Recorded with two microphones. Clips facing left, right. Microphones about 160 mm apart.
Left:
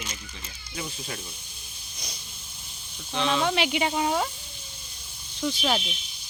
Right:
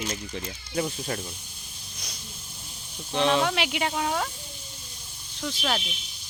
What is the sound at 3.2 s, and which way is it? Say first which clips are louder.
Speech: right 3 dB; 55° right (ahead or behind).